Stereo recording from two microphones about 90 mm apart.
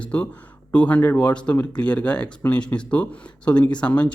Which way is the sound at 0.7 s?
15° left (ahead or behind).